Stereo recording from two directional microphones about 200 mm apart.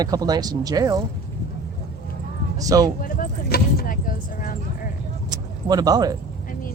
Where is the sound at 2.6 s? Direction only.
15° right (ahead or behind).